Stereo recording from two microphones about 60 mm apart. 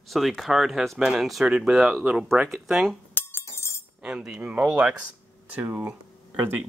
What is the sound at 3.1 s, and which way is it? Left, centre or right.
Music, left.